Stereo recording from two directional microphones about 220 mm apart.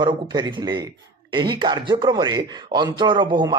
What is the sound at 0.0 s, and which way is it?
Speech, 20° right (ahead or behind).